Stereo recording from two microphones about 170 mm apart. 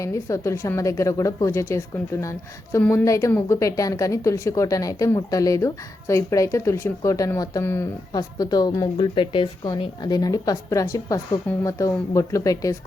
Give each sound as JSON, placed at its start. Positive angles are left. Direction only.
{"t": 0.0, "sound": "a woman's voice", "side_deg": 20}